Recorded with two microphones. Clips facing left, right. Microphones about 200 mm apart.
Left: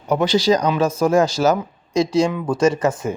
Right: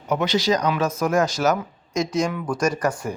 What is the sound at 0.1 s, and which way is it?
Speech, 30° left (ahead or behind).